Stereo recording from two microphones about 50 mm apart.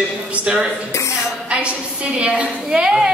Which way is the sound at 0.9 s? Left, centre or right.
Left.